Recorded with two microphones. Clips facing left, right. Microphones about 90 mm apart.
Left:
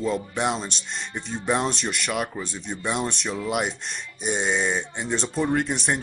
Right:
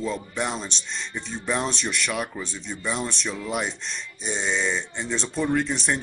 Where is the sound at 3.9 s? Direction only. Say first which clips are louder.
Left 3 dB; 55° left (ahead or behind).